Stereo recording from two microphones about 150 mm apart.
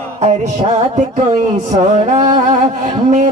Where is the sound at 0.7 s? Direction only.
55° right (ahead or behind).